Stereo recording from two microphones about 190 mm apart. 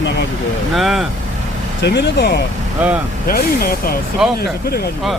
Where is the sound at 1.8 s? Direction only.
60° left (ahead or behind).